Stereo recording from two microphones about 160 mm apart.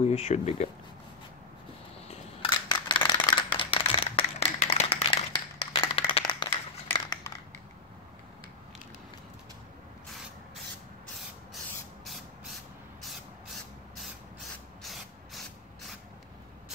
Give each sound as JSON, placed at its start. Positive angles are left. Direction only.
{"t": 0.0, "sound": "speech", "side_deg": 45}
{"t": 2.0, "sound": "scissors", "side_deg": 30}
{"t": 3.3, "sound": "a sound", "side_deg": 30}
{"t": 14.8, "sound": "spray", "side_deg": 0}